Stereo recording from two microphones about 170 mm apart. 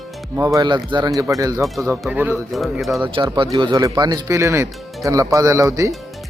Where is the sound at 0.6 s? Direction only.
25° right (ahead or behind).